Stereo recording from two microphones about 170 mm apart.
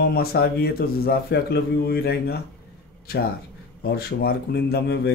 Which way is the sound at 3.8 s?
65° left (ahead or behind).